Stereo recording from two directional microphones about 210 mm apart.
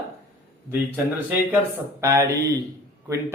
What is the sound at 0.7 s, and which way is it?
A man's voice, 10° right (ahead or behind).